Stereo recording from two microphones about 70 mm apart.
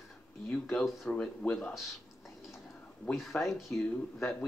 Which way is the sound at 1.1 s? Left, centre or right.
Centre.